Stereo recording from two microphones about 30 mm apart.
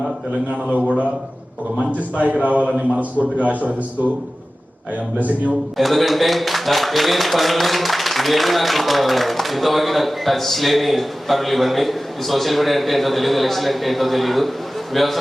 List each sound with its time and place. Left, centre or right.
1.9 s a man's voice: right
2.6 s a man's voice: right
3.0 s a man's voice: right
5.1 s a man's voice: right
5.7 s a man's voice: centre